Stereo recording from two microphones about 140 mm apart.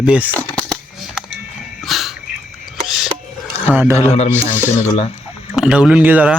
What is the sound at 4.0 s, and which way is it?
Speech, 50° left (ahead or behind).